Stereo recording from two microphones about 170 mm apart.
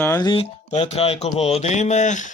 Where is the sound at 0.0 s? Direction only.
20° left (ahead or behind).